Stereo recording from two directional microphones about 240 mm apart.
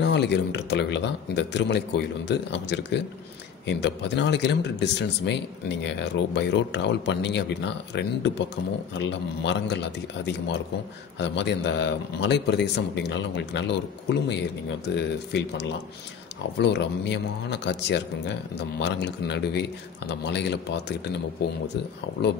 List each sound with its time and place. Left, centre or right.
0.0 s speech: left